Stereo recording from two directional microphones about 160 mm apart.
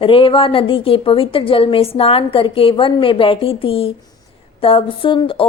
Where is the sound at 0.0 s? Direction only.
35° left (ahead or behind).